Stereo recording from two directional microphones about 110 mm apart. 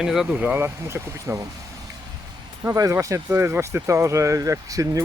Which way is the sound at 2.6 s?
25° right (ahead or behind).